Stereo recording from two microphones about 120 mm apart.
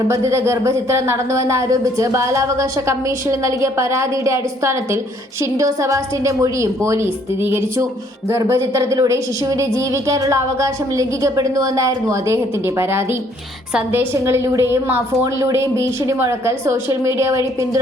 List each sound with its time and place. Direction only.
0.1 s speech: 25° right (ahead or behind)